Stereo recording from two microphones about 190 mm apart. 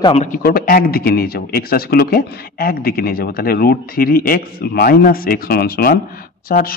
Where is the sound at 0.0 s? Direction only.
35° left (ahead or behind).